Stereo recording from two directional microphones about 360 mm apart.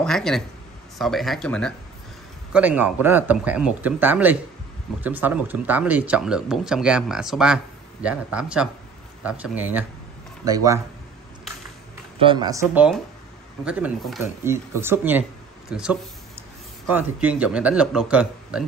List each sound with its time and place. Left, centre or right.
0.0 s speech: centre
12.2 s speech: centre